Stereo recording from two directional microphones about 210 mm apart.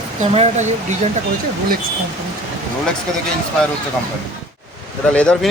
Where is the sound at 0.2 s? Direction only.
35° right (ahead or behind).